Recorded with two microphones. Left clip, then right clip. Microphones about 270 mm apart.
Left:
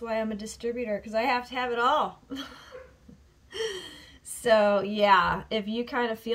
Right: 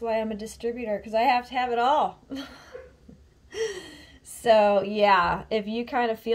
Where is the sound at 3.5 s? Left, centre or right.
Left.